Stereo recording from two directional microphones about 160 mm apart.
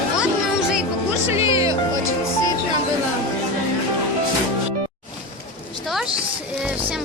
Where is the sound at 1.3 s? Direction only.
20° right (ahead or behind).